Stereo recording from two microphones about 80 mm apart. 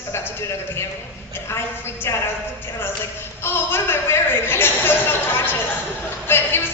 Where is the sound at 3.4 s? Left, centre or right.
Left.